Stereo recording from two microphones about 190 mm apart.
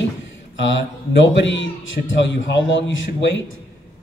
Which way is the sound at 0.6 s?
75° left (ahead or behind).